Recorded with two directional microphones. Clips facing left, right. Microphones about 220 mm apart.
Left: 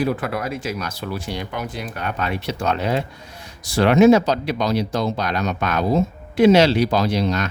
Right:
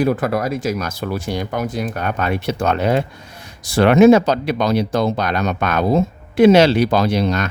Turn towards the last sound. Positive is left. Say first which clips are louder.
# right 3 dB
turn(degrees=-55)  # may be behind; listen again after turning